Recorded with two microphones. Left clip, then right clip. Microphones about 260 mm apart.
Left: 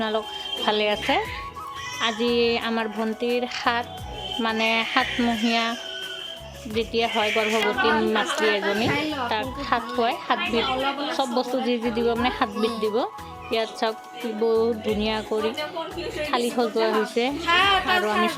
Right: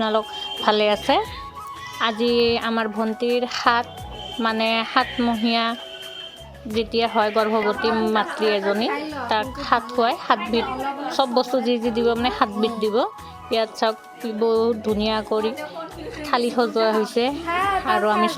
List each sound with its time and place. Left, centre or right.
0.0 s speech: centre
6.7 s speech: centre
17.5 s speech: right
17.8 s speech: centre